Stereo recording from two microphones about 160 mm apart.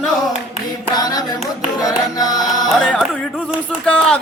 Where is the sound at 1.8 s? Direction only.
25° left (ahead or behind).